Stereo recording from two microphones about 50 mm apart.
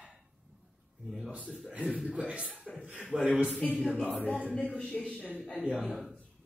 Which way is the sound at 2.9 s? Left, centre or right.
Centre.